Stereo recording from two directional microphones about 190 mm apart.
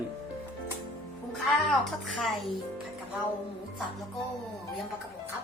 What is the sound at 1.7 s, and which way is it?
Music, centre (ahead or behind).